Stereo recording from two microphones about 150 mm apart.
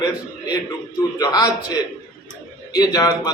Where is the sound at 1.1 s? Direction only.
25° left (ahead or behind).